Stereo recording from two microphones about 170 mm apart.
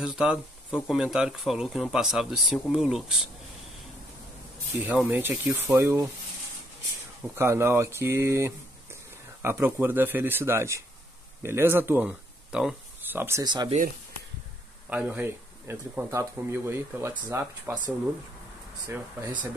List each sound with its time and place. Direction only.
0.0 s speech: 5° right (ahead or behind)
4.7 s speech: 10° right (ahead or behind)
7.3 s speech: 15° right (ahead or behind)
13.4 s speech: 25° right (ahead or behind)
14.9 s speech: 10° right (ahead or behind)